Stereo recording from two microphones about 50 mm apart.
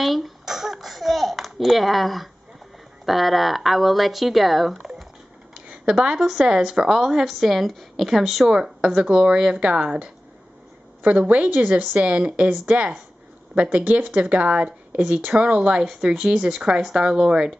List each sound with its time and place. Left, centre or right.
0.0 s a sound: centre
3.1 s speech: centre
5.7 s a woman's voice: centre
8.5 s a woman's voice: centre
11.0 s a woman's voice: right; by 17.6 s centre